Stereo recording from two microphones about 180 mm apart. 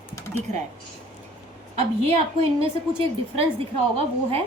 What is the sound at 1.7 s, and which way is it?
A woman's voice, 35° right (ahead or behind).